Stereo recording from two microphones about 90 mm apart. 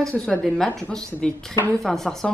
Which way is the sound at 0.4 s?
Centre (ahead or behind).